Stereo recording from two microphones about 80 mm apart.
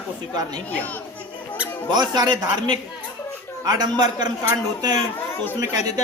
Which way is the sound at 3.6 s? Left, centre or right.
Right.